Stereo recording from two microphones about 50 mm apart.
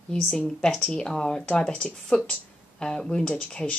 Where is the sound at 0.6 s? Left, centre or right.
Centre.